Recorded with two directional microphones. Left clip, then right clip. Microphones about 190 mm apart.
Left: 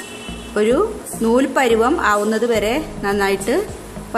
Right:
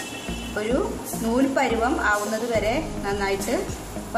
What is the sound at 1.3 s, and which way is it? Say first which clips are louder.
A woman's voice: left 7 dB; 55° left (ahead or behind).